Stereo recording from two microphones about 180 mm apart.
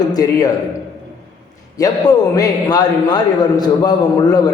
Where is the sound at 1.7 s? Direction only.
20° left (ahead or behind).